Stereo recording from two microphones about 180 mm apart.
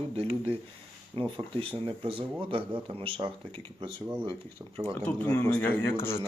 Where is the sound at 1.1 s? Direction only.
30° right (ahead or behind).